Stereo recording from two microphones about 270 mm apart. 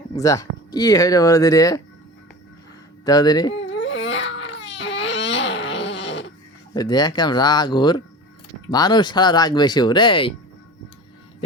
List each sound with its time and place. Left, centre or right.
0.1 s speech: centre
3.0 s speech: centre
3.7 s baby cry: left
4.8 s a sound: left
6.7 s speech: centre